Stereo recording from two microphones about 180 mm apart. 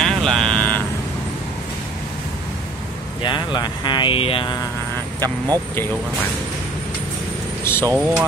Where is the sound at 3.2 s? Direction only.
25° left (ahead or behind).